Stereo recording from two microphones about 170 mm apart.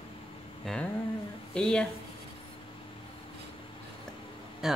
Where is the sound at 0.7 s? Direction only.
5° left (ahead or behind).